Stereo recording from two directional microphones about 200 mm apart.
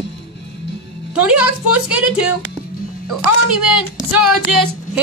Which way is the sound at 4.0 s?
Centre (ahead or behind).